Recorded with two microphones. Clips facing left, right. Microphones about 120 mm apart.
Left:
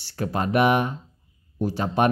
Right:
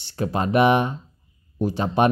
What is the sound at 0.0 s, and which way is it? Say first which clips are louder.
Speech: right 2 dB; 20° right (ahead or behind).